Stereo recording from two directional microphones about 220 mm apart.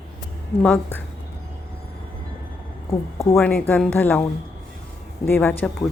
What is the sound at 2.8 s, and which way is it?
Speech, 15° left (ahead or behind).